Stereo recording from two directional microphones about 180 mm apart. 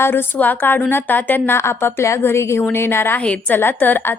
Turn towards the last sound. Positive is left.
turn(degrees=10)  # may be behind; listen again after turning